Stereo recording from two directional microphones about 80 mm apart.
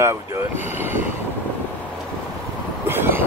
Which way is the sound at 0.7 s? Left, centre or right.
Right.